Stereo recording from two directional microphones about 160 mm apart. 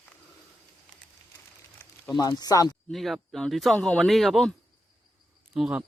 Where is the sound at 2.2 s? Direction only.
25° left (ahead or behind).